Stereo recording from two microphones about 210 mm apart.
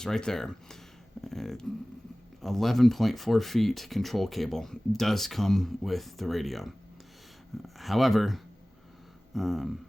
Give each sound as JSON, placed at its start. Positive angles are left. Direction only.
{"t": 0.0, "sound": "speech", "side_deg": 0}
{"t": 7.8, "sound": "speech", "side_deg": 0}